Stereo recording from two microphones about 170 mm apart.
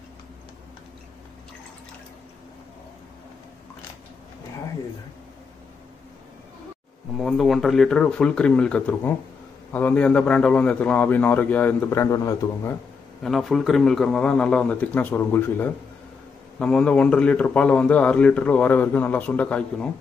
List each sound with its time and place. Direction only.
7.2 s a man's voice: centre (ahead or behind); by 12.7 s 20° left (ahead or behind)
13.2 s a man's voice: centre (ahead or behind)